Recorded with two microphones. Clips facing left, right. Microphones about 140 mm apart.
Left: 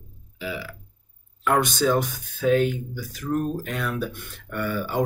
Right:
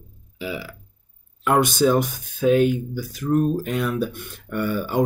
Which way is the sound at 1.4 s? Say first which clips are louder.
Right 3 dB; 15° right (ahead or behind).